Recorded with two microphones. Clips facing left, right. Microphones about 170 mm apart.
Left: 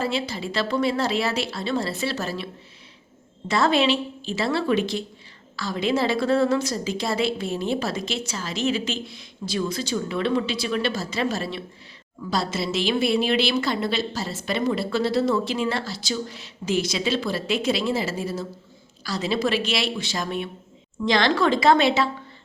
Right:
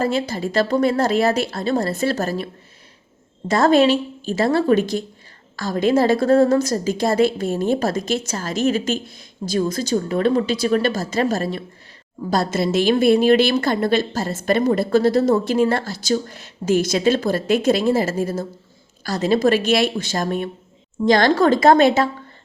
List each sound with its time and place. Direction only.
0.0 s a woman's voice: 45° right (ahead or behind)
3.5 s a woman's voice: 45° right (ahead or behind)